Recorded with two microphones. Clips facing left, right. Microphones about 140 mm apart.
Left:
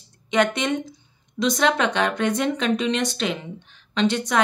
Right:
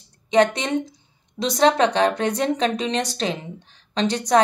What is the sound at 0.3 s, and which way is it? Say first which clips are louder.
A woman's voice: right 3 dB; 35° right (ahead or behind).